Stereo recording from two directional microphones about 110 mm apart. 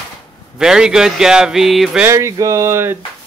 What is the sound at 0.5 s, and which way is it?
Speech, 5° right (ahead or behind).